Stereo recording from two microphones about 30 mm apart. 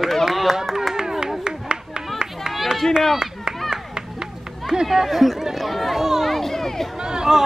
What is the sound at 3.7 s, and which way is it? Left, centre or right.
Run, right.